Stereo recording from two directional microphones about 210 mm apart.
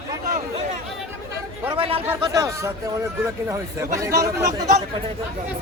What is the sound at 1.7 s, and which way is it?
Chatter, 25° right (ahead or behind).